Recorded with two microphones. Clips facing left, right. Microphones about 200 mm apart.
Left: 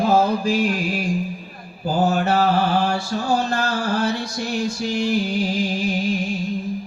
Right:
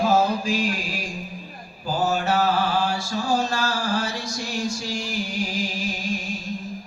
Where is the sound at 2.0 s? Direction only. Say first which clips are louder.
Left 3 dB; 60° left (ahead or behind).